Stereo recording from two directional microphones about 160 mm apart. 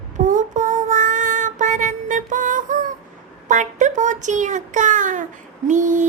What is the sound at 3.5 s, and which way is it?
Speech, 50° right (ahead or behind).